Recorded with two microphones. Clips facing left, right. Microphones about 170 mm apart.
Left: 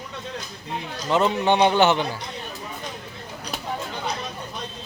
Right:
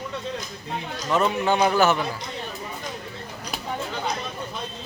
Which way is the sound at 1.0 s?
25° left (ahead or behind).